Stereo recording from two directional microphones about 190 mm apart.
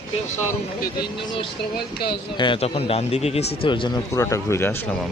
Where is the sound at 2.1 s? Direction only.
25° left (ahead or behind).